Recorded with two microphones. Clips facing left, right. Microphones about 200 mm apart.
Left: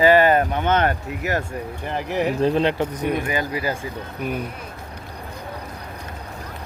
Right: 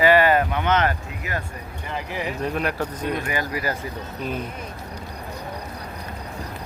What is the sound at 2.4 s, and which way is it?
Speech, 30° left (ahead or behind).